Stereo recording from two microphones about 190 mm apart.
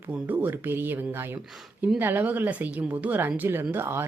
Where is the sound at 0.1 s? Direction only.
10° right (ahead or behind).